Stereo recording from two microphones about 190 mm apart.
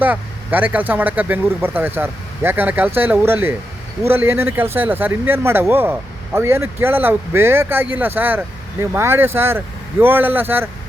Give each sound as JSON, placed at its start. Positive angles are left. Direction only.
{"t": 0.0, "sound": "speech", "side_deg": -10}